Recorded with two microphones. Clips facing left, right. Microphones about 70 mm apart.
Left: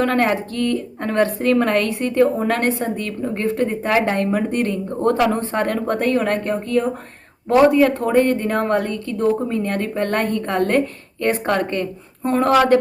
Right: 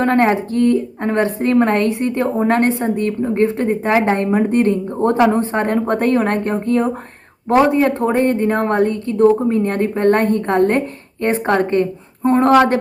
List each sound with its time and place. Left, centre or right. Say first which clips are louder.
0.0 s a woman's voice: right 3 dB; right